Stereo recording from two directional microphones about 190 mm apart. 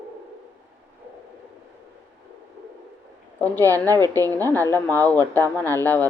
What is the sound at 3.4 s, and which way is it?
Speech, 10° left (ahead or behind).